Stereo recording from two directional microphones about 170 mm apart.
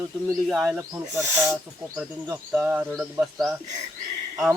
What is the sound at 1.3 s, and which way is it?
Speech, 15° right (ahead or behind).